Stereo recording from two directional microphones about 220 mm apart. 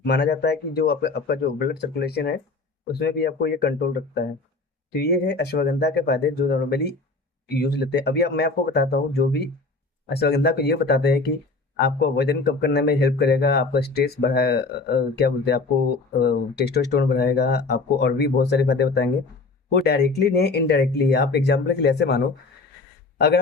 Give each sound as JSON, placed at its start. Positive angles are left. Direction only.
{"t": 0.0, "sound": "a man's voice", "side_deg": 50}